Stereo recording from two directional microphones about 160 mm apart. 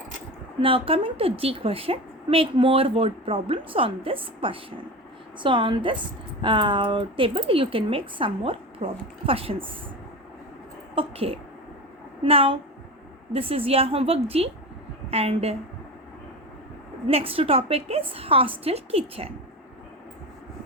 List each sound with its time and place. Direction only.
0.6 s a woman's voice: 35° right (ahead or behind)
10.9 s a woman's voice: 35° right (ahead or behind)
17.1 s a woman's voice: 35° right (ahead or behind)